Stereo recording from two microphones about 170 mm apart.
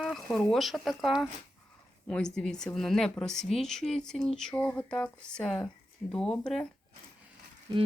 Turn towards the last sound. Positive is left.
turn(degrees=-25)  # may be behind; listen again after turning